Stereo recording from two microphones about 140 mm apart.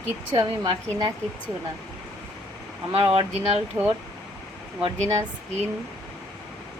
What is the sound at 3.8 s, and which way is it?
Speech, 20° right (ahead or behind).